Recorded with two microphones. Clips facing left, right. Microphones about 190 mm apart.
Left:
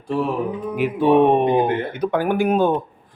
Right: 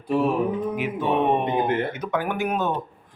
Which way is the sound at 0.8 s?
35° left (ahead or behind).